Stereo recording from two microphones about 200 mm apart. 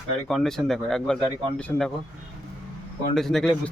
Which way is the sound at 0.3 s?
Centre (ahead or behind).